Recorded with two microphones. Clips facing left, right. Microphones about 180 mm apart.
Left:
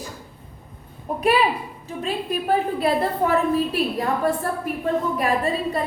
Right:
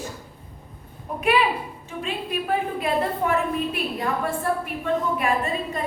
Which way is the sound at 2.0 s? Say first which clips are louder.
Left 3 dB; 35° left (ahead or behind).